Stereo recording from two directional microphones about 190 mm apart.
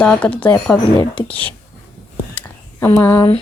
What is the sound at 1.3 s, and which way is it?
Speech, 10° left (ahead or behind).